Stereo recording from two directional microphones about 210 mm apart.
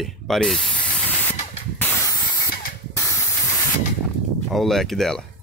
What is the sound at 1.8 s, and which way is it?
Spray, 10° left (ahead or behind).